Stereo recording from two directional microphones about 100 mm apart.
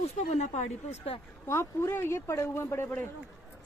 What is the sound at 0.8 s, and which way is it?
Speech, 85° left.